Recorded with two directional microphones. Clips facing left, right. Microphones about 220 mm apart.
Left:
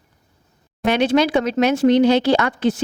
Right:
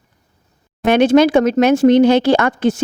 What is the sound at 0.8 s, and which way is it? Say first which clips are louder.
Speech: right 6 dB; 50° right (ahead or behind).